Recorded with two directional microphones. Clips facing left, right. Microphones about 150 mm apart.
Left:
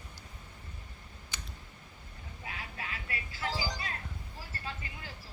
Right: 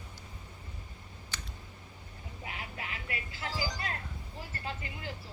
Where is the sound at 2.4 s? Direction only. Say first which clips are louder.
Even; 25° right (ahead or behind).